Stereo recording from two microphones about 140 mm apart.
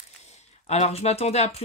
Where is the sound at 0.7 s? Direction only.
50° left (ahead or behind).